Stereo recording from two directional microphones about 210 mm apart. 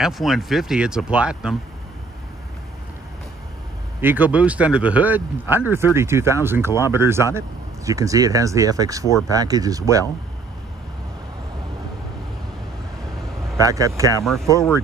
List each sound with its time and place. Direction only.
0.0 s speech: centre (ahead or behind)
4.0 s speech: 10° right (ahead or behind)
13.7 s speech: 15° right (ahead or behind)
14.2 s speech: centre (ahead or behind)